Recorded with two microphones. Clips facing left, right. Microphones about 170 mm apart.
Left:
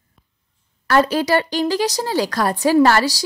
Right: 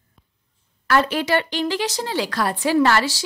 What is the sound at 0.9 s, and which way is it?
A woman's voice, 40° left (ahead or behind).